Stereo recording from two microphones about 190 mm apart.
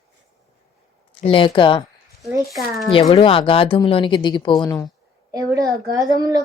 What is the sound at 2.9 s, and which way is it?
Speech, 25° left (ahead or behind).